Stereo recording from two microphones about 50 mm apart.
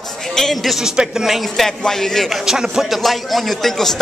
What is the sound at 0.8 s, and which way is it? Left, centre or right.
Speech, centre.